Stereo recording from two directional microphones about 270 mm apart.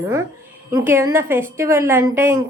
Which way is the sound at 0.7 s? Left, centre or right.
Centre.